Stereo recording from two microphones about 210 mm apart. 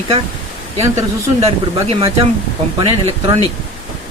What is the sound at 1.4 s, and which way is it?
Speech, 30° right (ahead or behind).